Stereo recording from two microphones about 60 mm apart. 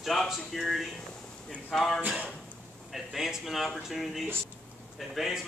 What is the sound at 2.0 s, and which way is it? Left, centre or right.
Speech, right.